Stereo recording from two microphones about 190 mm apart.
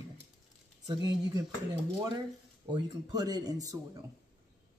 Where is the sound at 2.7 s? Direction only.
20° right (ahead or behind).